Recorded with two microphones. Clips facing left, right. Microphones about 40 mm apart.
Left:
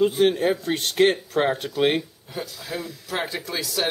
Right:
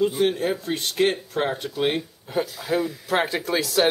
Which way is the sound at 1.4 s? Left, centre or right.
Centre.